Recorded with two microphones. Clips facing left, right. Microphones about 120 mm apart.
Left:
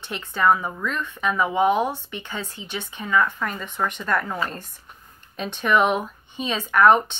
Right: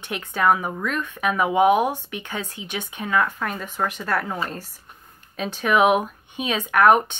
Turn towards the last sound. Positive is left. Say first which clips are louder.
# even
turn(degrees=-10)  # may be behind; listen again after turning